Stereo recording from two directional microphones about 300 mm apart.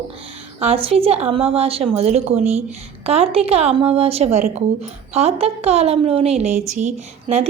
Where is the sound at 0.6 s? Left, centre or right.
Centre.